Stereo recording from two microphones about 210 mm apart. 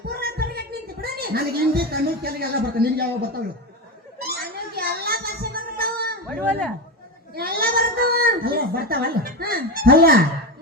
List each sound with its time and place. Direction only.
0.1 s a sound: 45° right (ahead or behind)
1.0 s a woman's voice: 45° right (ahead or behind)
4.3 s music: 45° right (ahead or behind)
6.2 s speech: 5° left (ahead or behind)
7.3 s a child's voice: 45° right (ahead or behind)